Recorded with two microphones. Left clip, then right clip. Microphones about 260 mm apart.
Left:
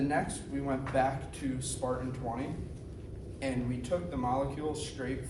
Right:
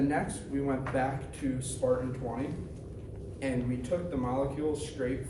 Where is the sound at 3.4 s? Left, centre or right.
Left.